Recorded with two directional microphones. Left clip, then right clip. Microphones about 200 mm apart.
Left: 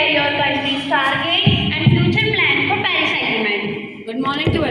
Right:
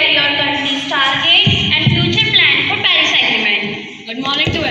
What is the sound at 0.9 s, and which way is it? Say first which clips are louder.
Music: right 5 dB; 20° left (ahead or behind).